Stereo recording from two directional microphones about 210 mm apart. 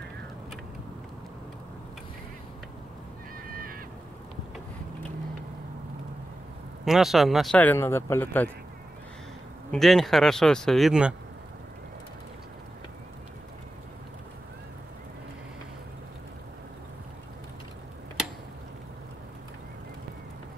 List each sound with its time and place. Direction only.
6.8 s speech: centre (ahead or behind)
9.7 s speech: centre (ahead or behind)